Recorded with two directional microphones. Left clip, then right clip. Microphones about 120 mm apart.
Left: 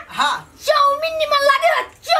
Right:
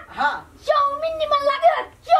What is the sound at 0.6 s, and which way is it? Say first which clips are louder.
Speech: left 4 dB; 5° left (ahead or behind).